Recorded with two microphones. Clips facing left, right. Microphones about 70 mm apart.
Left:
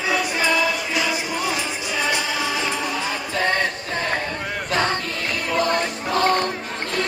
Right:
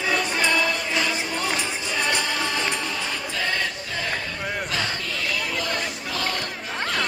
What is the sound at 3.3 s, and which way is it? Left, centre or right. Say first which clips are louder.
Music: left 6 dB; left.